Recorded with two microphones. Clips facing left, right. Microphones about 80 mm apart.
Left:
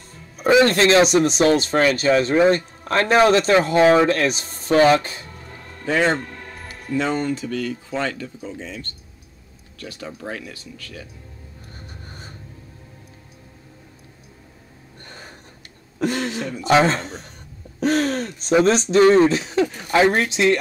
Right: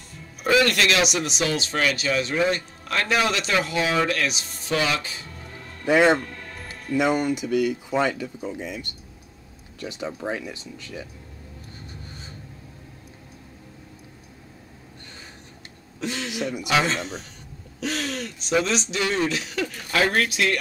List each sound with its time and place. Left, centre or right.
0.5 s speech: left
5.9 s speech: centre
15.0 s a sound: left
16.0 s speech: left
17.7 s throat clearing: left
18.5 s speech: left